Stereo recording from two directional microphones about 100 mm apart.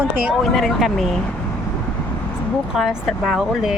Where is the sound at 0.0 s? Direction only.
20° right (ahead or behind).